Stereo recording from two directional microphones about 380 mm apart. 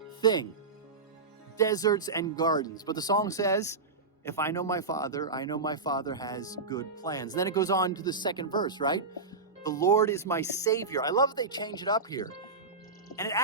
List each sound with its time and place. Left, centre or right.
0.2 s speech: centre
1.5 s speech: centre